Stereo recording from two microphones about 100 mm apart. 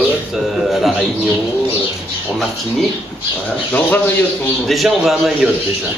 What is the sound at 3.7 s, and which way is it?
Speech, 20° left (ahead or behind).